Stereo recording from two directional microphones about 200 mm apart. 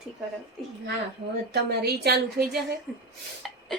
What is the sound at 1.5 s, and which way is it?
A woman's voice, 55° right (ahead or behind).